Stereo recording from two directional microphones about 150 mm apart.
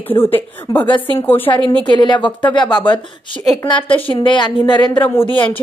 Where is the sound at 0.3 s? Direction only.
15° left (ahead or behind).